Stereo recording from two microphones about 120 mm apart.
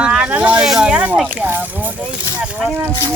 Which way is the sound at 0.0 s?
10° right (ahead or behind).